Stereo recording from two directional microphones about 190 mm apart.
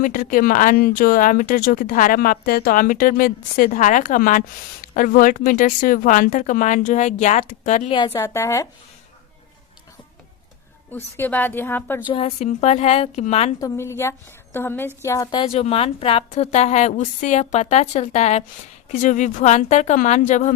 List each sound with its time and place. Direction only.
0.0 s speech: 45° left (ahead or behind)
7.9 s a woman's voice: 20° left (ahead or behind)
10.9 s a woman's voice: 10° left (ahead or behind)
12.0 s a woman's voice: 30° left (ahead or behind)
13.6 s a woman's voice: 15° left (ahead or behind); by 20.5 s 40° left (ahead or behind)